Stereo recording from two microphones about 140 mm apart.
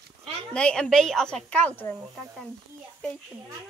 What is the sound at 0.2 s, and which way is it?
A woman's voice, 5° left (ahead or behind).